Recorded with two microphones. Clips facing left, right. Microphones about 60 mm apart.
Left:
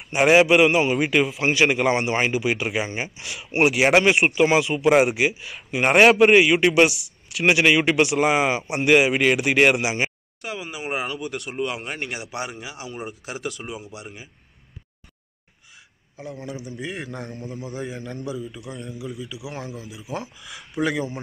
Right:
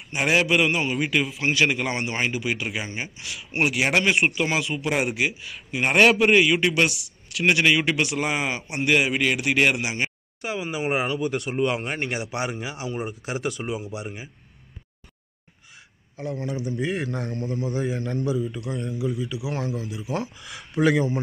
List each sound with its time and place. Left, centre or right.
0.1 s a man's voice: centre
1.2 s speech: centre
3.5 s speech: centre
6.9 s speech: centre
7.4 s a man's voice: centre
10.4 s speech: centre
16.2 s speech: centre